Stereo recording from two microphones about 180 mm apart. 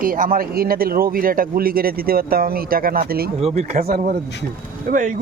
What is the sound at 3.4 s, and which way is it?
Speech, 35° right (ahead or behind).